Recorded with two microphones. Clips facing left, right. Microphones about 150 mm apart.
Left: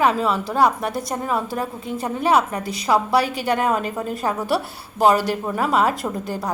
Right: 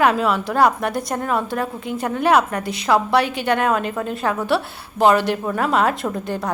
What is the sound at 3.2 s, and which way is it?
Speech, 35° left (ahead or behind).